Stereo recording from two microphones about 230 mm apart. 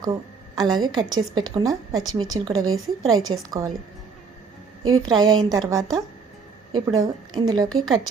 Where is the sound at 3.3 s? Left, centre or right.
Centre.